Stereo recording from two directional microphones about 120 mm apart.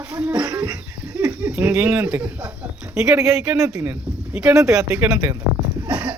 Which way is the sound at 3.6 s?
25° right (ahead or behind).